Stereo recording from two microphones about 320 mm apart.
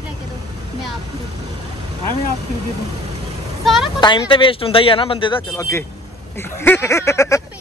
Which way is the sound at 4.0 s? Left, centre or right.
Centre.